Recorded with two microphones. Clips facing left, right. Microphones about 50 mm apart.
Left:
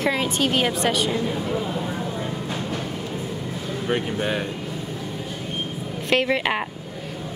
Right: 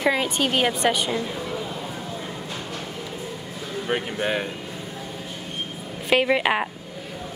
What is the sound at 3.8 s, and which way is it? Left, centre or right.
Speech, centre.